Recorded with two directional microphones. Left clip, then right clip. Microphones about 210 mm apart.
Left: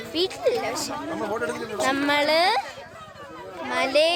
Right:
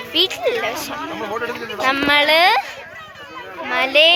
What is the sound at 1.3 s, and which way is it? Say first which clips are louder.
A woman's voice: right 3 dB; 25° left (ahead or behind).